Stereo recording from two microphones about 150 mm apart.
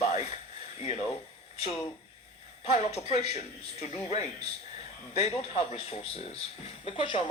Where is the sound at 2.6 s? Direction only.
45° left (ahead or behind).